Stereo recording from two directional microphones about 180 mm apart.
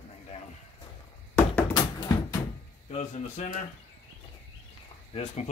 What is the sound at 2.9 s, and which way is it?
Speech, 35° left (ahead or behind).